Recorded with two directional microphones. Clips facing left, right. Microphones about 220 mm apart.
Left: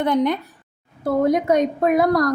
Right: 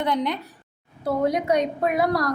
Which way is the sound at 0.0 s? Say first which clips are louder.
Left 6 dB; 50° left (ahead or behind).